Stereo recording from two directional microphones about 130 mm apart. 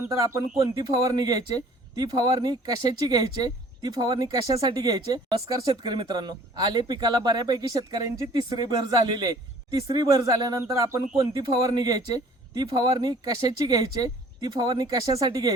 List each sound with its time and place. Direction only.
0.1 s speech: 25° right (ahead or behind)